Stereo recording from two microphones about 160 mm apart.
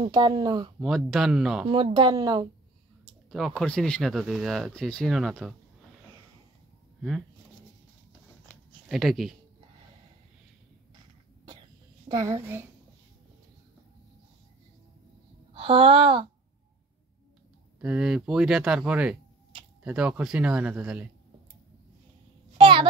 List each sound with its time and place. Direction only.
0.1 s speech: 25° right (ahead or behind)
0.7 s speech: centre (ahead or behind)
2.0 s speech: 25° right (ahead or behind)
3.3 s speech: centre (ahead or behind)
7.0 s speech: centre (ahead or behind)
8.8 s speech: centre (ahead or behind)
12.1 s a child's voice: 20° right (ahead or behind)
15.5 s speech: 35° right (ahead or behind)
17.7 s speech: 5° right (ahead or behind)
22.6 s a sound: 30° right (ahead or behind)